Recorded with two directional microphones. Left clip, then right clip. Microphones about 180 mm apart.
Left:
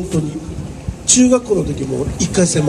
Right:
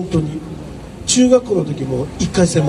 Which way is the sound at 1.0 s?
35° right (ahead or behind).